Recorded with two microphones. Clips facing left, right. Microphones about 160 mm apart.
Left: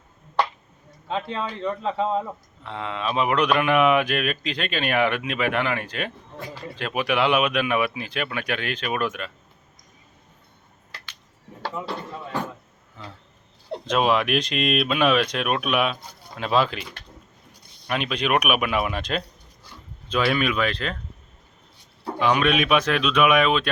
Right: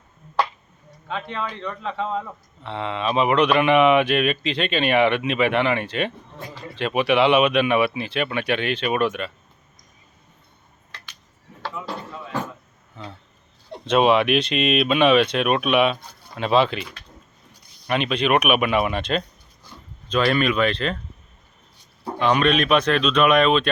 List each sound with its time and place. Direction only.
1.0 s a man's voice: 30° left (ahead or behind)
2.6 s speech: centre (ahead or behind)
13.9 s speech: centre (ahead or behind)
17.8 s speech: centre (ahead or behind)
22.2 s speech: 5° left (ahead or behind)